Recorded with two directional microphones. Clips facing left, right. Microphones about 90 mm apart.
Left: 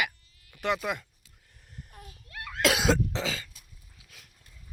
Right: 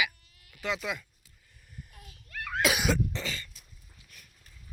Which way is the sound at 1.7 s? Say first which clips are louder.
Left 3 dB; 45° left (ahead or behind).